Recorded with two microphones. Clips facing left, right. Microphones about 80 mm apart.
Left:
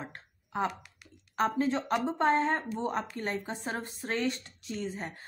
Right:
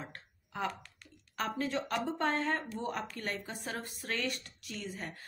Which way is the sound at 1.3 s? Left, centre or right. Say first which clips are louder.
Left 6 dB; left.